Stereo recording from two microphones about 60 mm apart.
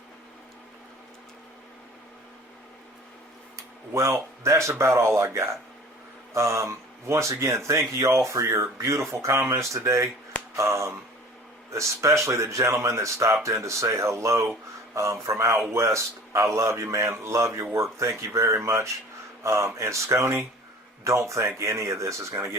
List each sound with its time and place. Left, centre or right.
3.9 s speech: right